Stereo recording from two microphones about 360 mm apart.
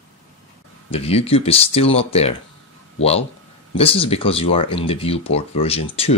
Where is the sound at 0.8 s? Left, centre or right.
Centre.